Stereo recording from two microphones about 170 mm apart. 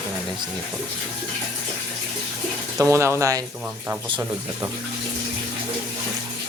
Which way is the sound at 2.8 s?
15° right (ahead or behind).